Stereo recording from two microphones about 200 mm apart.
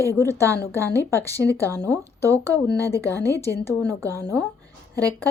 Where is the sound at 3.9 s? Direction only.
15° right (ahead or behind).